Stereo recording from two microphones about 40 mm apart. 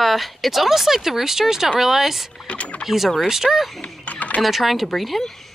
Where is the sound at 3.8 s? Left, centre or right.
Left.